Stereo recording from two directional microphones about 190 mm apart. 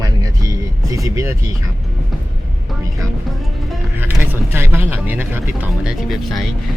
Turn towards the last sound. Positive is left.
turn(degrees=0)  # may be behind; listen again after turning